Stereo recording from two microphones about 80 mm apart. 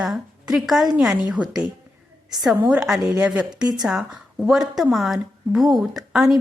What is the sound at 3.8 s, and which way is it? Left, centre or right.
A woman's voice, centre.